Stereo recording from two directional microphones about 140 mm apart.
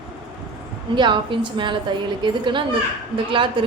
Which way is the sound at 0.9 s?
35° right (ahead or behind).